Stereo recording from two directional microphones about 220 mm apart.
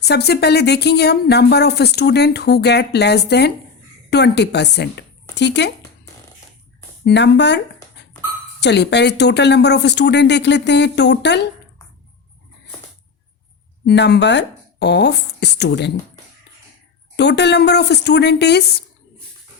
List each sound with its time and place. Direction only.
0.0 s speech: 50° left (ahead or behind)
7.0 s speech: 50° left (ahead or behind)
13.8 s speech: 50° left (ahead or behind)
17.2 s speech: 50° left (ahead or behind)